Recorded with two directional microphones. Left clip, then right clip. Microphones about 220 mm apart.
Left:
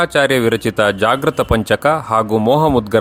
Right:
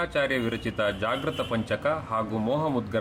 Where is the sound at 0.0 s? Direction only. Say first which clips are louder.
Left 13 dB; 50° left (ahead or behind).